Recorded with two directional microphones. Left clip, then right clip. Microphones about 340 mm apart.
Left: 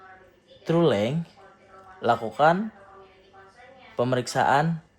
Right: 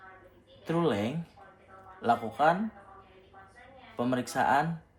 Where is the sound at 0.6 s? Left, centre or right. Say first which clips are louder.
Left 7 dB; left.